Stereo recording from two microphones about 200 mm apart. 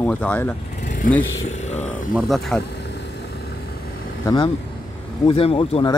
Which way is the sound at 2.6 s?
55° left (ahead or behind).